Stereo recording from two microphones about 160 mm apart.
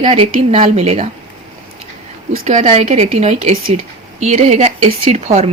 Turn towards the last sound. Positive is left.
turn(degrees=-40)  # may be behind; listen again after turning